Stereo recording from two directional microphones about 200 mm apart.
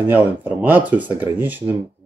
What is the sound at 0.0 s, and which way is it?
Speech, 10° right (ahead or behind).